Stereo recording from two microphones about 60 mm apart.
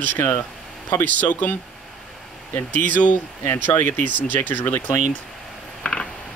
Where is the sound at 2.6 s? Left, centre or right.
Left.